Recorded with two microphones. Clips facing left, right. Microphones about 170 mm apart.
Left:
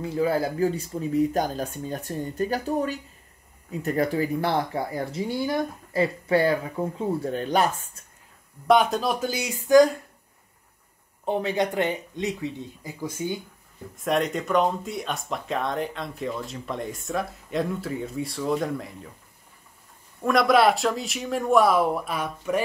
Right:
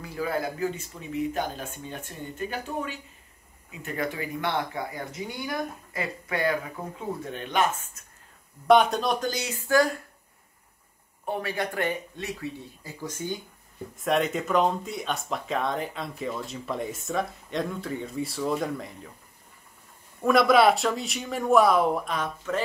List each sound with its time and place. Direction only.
0.0 s speech: 25° left (ahead or behind)
8.6 s speech: centre (ahead or behind); by 9.8 s 15° left (ahead or behind)
11.2 s speech: 20° left (ahead or behind)
13.9 s speech: centre (ahead or behind)
20.2 s speech: centre (ahead or behind)